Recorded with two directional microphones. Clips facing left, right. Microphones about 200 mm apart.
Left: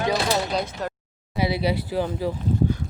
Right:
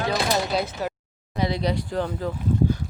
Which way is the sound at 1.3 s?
5° left (ahead or behind).